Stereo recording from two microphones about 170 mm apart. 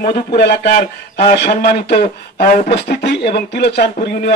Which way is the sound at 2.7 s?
80° left.